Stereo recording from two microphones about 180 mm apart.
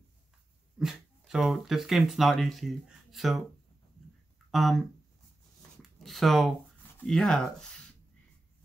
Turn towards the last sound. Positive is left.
turn(degrees=5)  # may be behind; listen again after turning